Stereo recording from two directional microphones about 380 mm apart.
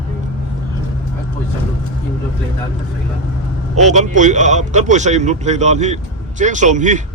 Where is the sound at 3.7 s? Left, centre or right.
Centre.